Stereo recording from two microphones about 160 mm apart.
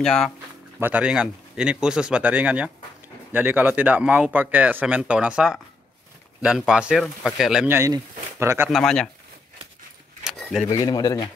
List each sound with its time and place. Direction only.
0.0 s speech: 5° left (ahead or behind)
0.7 s speech: 10° right (ahead or behind)
7.6 s speech: 15° right (ahead or behind)
8.6 s speech: centre (ahead or behind)
10.2 s keys jangling: centre (ahead or behind)
10.7 s speech: 25° left (ahead or behind)